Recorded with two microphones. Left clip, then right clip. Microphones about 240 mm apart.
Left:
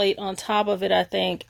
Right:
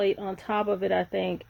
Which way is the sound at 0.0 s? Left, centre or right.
Left.